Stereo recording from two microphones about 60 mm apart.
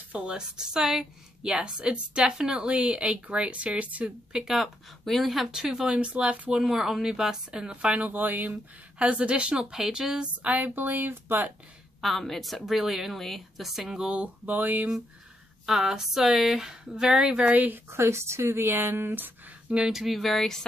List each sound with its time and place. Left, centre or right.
0.3 s a woman's voice: centre
4.3 s a woman's voice: centre
5.9 s speech: right
6.6 s a woman's voice: centre
8.1 s speech: right
12.0 s a woman's voice: centre; by 14.9 s right
15.6 s a woman's voice: centre; by 17.7 s right
17.8 s speech: right
19.9 s a woman's voice: centre